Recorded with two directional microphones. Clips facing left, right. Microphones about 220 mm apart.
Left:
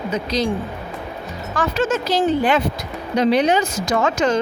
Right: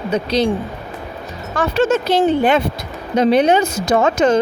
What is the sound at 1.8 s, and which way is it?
A woman's voice, 60° right (ahead or behind).